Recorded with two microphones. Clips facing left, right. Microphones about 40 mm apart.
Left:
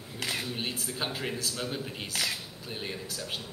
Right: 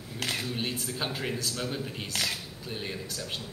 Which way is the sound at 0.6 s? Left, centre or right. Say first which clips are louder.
Right 1 dB; centre.